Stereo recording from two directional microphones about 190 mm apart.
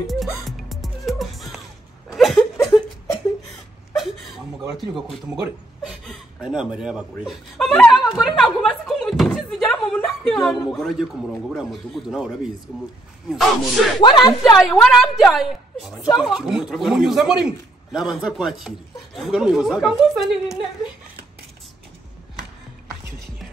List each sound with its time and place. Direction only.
0.0 s music: centre (ahead or behind)
2.0 s a sound: centre (ahead or behind)
3.9 s dog: centre (ahead or behind)
5.9 s chuckle: 5° right (ahead or behind)
11.5 s speech: centre (ahead or behind)
13.3 s speech: centre (ahead or behind)
14.0 s speech: 25° left (ahead or behind)
14.4 s speech: centre (ahead or behind)